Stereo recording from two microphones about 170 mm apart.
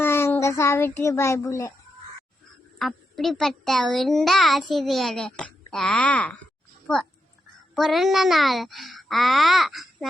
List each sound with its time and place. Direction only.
0.0 s speech: 15° left (ahead or behind)
2.7 s a child's voice: centre (ahead or behind)
7.8 s a child's voice: centre (ahead or behind)